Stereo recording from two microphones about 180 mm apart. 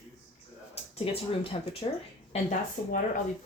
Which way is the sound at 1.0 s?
30° left (ahead or behind).